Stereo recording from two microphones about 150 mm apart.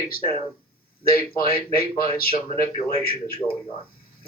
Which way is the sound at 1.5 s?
90° left.